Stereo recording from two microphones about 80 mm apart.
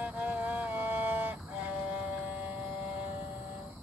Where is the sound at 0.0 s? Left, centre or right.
Centre.